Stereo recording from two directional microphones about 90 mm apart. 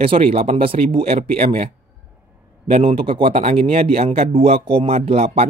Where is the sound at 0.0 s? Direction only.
90° right.